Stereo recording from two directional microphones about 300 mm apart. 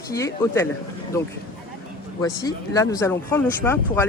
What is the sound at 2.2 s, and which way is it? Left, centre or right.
A man's voice, centre.